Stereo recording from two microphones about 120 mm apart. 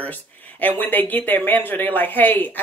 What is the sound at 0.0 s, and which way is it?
Speech, 15° left (ahead or behind).